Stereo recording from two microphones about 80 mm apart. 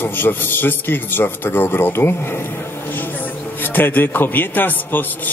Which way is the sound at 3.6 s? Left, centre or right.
Left.